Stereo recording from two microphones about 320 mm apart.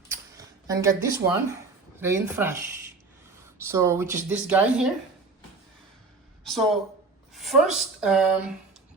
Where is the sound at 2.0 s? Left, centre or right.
Centre.